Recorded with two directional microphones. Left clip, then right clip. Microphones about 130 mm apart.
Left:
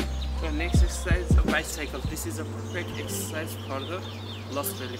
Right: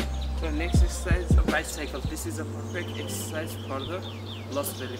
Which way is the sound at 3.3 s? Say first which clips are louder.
Right 2 dB; centre (ahead or behind).